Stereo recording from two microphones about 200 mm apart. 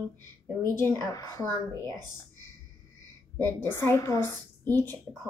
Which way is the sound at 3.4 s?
10° left (ahead or behind).